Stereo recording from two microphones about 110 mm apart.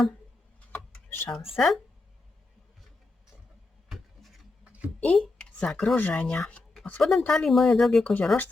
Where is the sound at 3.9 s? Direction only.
Centre (ahead or behind).